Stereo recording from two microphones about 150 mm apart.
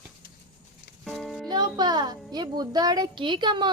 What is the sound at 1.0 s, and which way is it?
Music, centre (ahead or behind).